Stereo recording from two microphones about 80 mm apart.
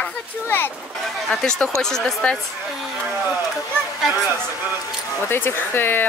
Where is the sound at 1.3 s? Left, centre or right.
Centre.